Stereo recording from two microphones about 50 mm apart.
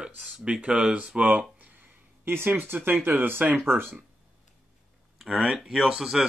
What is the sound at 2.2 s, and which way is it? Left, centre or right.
Speech, right.